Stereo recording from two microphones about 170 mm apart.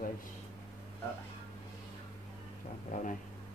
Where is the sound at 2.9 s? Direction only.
50° left (ahead or behind).